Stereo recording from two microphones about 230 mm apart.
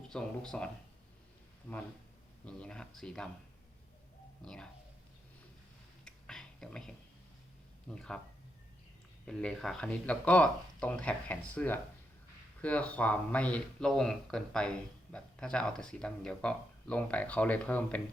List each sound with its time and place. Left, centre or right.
0.1 s speech: centre
2.4 s speech: centre
4.4 s speech: centre
6.1 s a sound: centre
7.9 s speech: centre
9.2 s speech: centre